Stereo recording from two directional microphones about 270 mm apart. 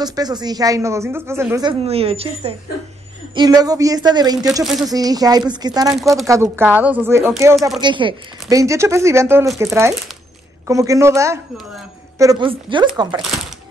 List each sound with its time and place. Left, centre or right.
0.0 s a woman's voice: centre
7.8 s a woman's voice: centre
13.2 s speech: centre